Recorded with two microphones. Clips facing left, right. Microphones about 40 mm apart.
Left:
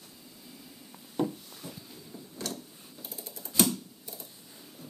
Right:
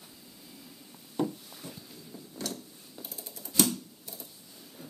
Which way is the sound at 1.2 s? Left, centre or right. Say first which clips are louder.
Left 1 dB; centre.